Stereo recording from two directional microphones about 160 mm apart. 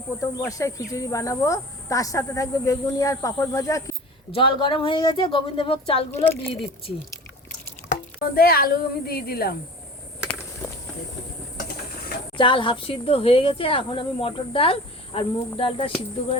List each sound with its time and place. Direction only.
0.2 s speech: 20° left (ahead or behind)
4.3 s speech: 35° left (ahead or behind)
6.2 s a woman's voice: 10° left (ahead or behind)
8.2 s a woman's voice: 70° left (ahead or behind)
10.2 s a sound: 15° left (ahead or behind)
12.4 s speech: 30° left (ahead or behind)